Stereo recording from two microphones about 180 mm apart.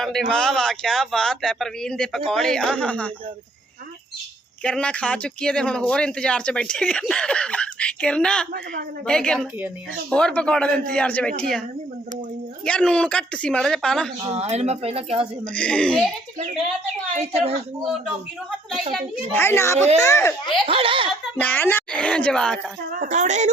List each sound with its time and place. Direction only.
0.0 s speech: centre (ahead or behind)
4.6 s speech: 5° left (ahead or behind)
12.6 s speech: 5° left (ahead or behind)
14.3 s speech: 35° right (ahead or behind)
15.5 s speech: 5° left (ahead or behind)
17.2 s speech: 35° right (ahead or behind)
19.4 s a child's voice: 15° left (ahead or behind)
20.7 s speech: 30° right (ahead or behind)
21.3 s a child's voice: 10° left (ahead or behind)
22.9 s a woman's voice: 45° right (ahead or behind)